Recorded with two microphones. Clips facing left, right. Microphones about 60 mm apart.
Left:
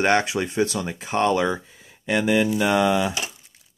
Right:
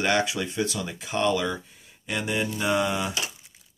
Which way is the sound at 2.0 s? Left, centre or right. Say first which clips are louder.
Left 8 dB; left.